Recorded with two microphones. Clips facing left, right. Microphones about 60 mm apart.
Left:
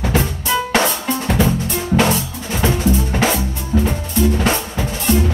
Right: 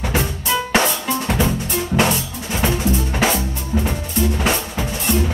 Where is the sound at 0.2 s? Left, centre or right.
Centre.